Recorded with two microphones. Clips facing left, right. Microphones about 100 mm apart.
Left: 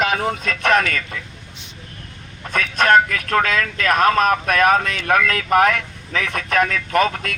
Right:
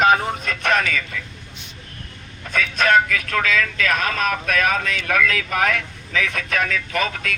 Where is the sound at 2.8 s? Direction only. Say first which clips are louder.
Left 3 dB; 45° left (ahead or behind).